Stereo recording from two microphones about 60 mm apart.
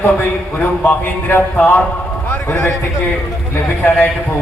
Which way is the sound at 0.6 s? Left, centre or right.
Left.